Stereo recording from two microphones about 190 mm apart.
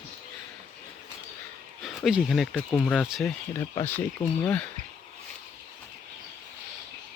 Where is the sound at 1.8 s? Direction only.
Centre (ahead or behind).